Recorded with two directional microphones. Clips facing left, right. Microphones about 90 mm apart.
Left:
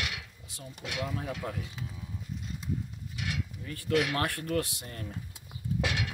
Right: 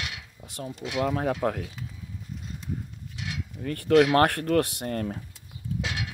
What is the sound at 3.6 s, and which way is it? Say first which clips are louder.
Speech: right 10 dB; 60° right (ahead or behind).